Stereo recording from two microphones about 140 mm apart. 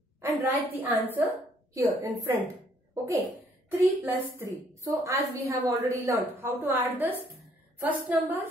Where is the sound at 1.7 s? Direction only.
20° right (ahead or behind).